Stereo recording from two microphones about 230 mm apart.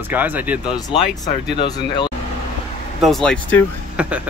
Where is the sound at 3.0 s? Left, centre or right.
Centre.